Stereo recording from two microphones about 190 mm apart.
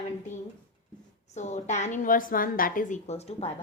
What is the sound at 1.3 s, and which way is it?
A woman's voice, 40° left (ahead or behind).